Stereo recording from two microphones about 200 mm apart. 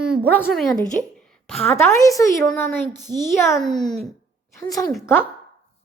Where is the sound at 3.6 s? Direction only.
Centre (ahead or behind).